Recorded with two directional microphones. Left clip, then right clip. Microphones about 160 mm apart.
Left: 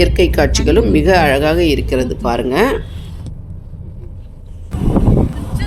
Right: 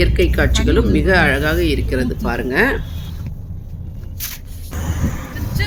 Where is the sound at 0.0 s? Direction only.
20° left (ahead or behind).